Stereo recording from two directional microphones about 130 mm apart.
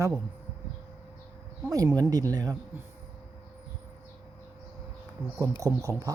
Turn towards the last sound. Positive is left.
turn(degrees=-25)  # may be behind; listen again after turning